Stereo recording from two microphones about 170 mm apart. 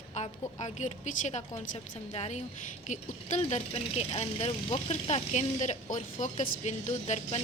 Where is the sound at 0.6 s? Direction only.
45° left (ahead or behind).